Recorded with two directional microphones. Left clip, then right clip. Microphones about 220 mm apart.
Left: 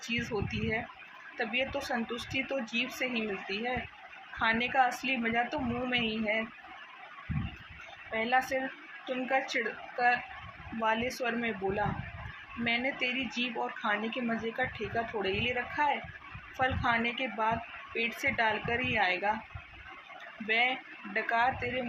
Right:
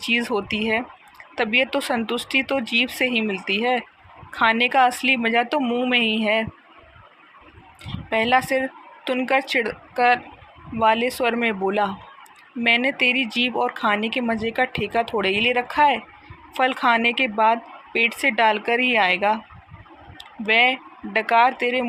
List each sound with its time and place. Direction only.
0.1 s speech: 45° right (ahead or behind)
8.1 s speech: 50° right (ahead or behind)
20.5 s speech: 50° right (ahead or behind)